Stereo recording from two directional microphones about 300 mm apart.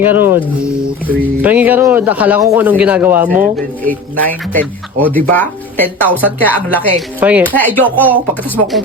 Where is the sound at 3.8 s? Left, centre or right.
Centre.